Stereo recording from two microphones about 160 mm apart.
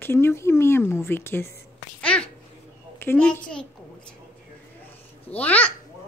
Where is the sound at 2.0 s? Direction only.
5° left (ahead or behind).